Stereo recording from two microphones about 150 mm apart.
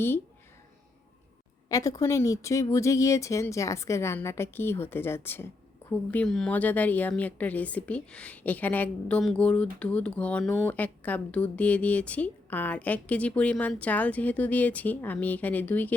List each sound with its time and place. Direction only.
1.7 s a woman's voice: 20° left (ahead or behind)